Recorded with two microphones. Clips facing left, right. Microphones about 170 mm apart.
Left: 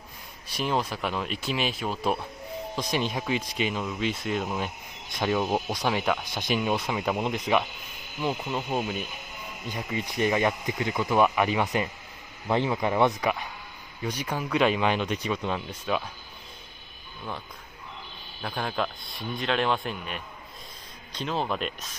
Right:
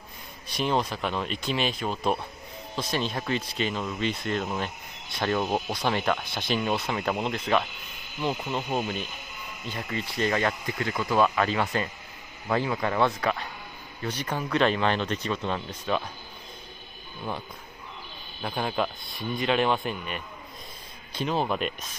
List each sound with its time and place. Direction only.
0.6 s a man's voice: 5° left (ahead or behind)
18.4 s a man's voice: 5° right (ahead or behind)